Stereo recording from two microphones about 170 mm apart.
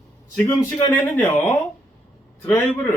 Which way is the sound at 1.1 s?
10° left (ahead or behind).